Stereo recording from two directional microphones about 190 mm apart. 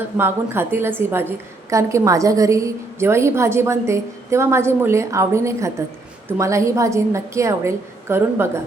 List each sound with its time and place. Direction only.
0.2 s a woman's voice: 10° right (ahead or behind)